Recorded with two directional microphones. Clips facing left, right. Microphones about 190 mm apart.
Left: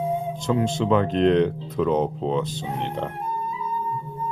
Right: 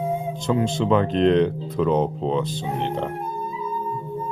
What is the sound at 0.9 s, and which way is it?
Speech, 30° right (ahead or behind).